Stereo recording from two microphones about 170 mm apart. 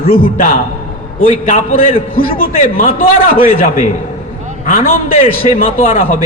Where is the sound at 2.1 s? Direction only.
60° left (ahead or behind).